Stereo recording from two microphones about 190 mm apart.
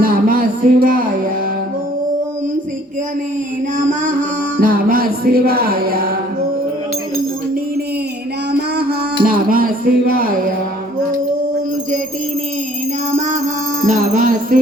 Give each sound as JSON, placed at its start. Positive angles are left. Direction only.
{"t": 0.0, "sound": "music", "side_deg": -50}
{"t": 3.8, "sound": "music", "side_deg": -45}
{"t": 8.5, "sound": "music", "side_deg": -55}
{"t": 13.1, "sound": "music", "side_deg": -40}